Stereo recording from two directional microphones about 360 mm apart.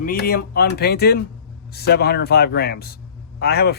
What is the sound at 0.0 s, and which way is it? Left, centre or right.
A man's voice, left.